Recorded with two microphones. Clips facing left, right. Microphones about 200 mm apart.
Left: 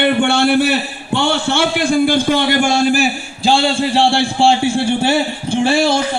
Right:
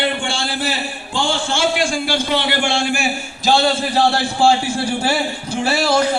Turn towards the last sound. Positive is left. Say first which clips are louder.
# left 3 dB
turn(degrees=25)  # may be behind; listen again after turning